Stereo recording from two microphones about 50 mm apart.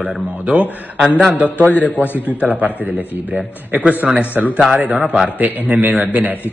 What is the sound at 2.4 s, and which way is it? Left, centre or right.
Speech, right.